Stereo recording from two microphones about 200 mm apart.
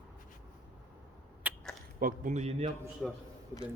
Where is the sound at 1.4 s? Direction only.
10° right (ahead or behind).